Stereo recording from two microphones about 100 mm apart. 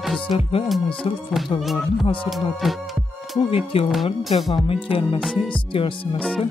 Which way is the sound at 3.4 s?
75° left (ahead or behind).